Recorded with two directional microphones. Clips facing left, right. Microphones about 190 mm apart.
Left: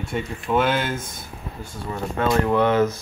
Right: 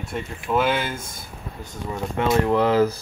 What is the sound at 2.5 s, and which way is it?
Speech, 30° right (ahead or behind).